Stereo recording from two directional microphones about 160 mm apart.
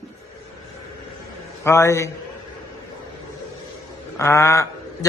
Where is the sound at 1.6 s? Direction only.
15° left (ahead or behind).